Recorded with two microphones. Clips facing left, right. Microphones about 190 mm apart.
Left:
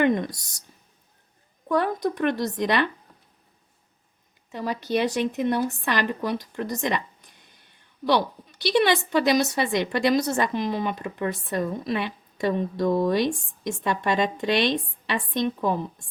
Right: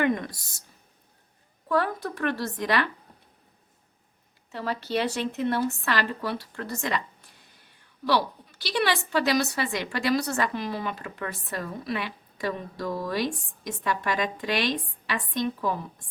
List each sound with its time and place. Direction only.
0.0 s a sound: 20° left (ahead or behind)
1.6 s a woman's voice: 20° left (ahead or behind)
4.5 s a woman's voice: 15° left (ahead or behind)